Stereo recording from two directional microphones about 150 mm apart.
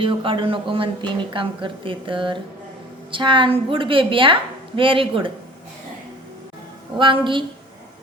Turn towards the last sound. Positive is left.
turn(degrees=-35)  # may be behind; listen again after turning